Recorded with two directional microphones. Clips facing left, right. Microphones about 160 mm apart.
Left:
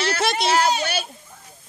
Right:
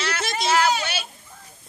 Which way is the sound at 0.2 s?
70° left (ahead or behind).